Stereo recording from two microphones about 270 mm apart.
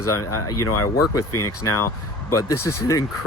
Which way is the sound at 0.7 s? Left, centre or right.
Left.